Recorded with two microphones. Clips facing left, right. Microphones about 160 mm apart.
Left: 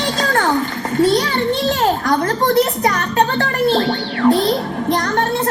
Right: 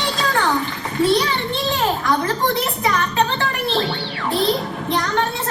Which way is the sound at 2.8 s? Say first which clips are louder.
Left 3 dB; 45° left (ahead or behind).